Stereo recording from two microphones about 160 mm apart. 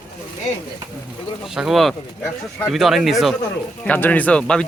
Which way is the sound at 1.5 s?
Centre (ahead or behind).